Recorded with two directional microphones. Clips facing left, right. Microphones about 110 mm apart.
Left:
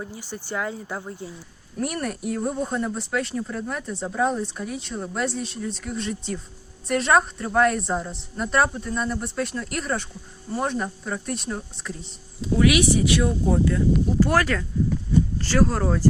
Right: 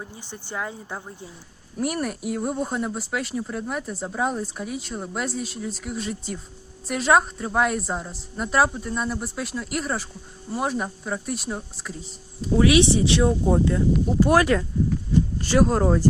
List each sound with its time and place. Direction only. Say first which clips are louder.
0.2 s speech: left 2 dB; 20° right (ahead or behind)
1.8 s a woman's voice: right 1 dB; 5° right (ahead or behind)
12.5 s speech: right 2 dB; 30° right (ahead or behind)